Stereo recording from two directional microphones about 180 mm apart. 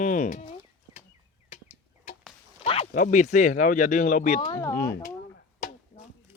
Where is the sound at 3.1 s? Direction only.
45° left (ahead or behind).